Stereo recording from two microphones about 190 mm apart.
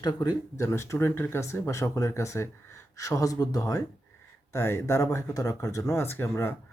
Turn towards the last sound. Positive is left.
turn(degrees=10)  # may be behind; listen again after turning